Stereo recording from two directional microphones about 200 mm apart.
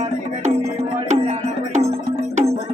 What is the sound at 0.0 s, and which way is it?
Music, 35° right (ahead or behind).